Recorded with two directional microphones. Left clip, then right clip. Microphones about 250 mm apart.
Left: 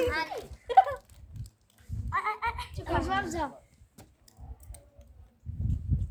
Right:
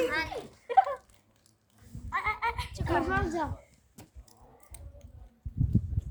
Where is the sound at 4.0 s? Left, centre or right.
Centre.